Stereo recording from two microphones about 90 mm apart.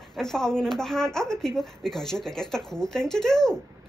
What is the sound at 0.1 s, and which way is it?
A woman's voice, 5° left (ahead or behind).